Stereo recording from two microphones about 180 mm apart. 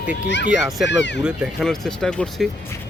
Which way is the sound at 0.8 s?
85° left.